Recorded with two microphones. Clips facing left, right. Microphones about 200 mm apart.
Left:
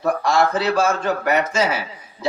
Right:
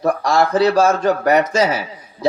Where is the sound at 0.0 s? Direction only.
35° right (ahead or behind).